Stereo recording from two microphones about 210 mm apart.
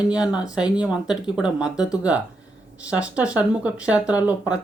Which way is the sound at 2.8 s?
5° right (ahead or behind).